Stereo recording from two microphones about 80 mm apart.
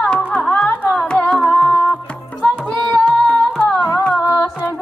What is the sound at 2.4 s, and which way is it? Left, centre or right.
Music, centre.